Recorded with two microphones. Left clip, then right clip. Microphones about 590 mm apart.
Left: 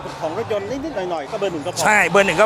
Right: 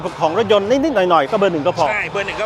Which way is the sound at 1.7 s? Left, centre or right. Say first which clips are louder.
Left 3 dB; left.